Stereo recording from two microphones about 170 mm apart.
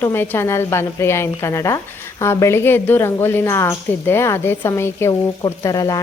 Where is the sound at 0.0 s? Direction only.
15° left (ahead or behind).